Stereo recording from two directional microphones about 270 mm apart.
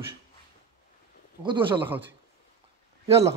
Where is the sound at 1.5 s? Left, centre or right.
Centre.